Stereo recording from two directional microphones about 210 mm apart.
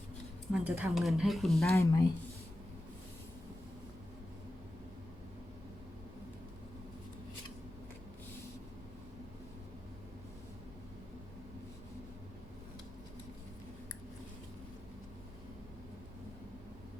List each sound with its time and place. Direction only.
0.5 s speech: 5° right (ahead or behind)
1.7 s speech: 15° left (ahead or behind)